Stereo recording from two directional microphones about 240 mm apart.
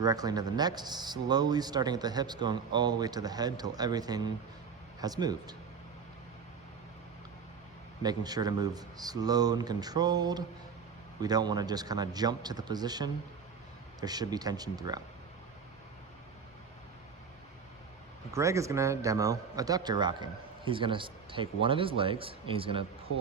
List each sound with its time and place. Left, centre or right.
0.0 s speech: centre
8.0 s speech: centre
18.3 s a man's voice: centre